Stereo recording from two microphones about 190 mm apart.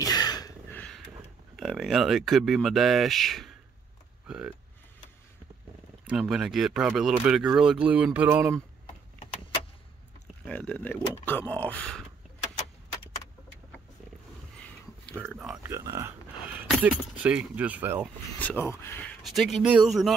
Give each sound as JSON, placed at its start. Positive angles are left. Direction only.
{"t": 0.0, "sound": "a sound", "side_deg": 20}
{"t": 0.7, "sound": "a sound", "side_deg": 10}
{"t": 1.6, "sound": "speech", "side_deg": 0}
{"t": 6.0, "sound": "speech", "side_deg": -5}
{"t": 10.4, "sound": "speech", "side_deg": 5}
{"t": 15.1, "sound": "speech", "side_deg": -10}
{"t": 18.4, "sound": "speech", "side_deg": 10}
{"t": 19.2, "sound": "speech", "side_deg": 0}